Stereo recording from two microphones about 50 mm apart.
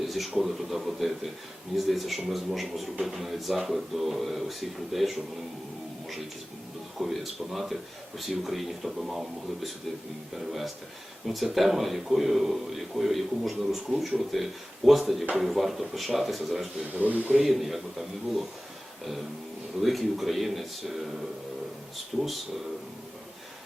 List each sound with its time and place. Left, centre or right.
0.1 s a man's voice: centre
7.0 s a man's voice: centre
11.5 s a man's voice: centre
16.9 s speech: right
17.4 s a man's voice: centre
19.8 s a man's voice: centre
22.1 s speech: centre